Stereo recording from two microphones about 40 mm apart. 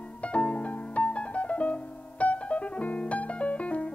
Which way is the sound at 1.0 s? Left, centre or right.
Left.